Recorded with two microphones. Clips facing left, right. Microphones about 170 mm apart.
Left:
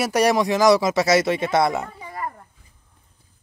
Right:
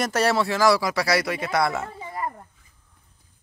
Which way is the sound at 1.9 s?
25° right (ahead or behind).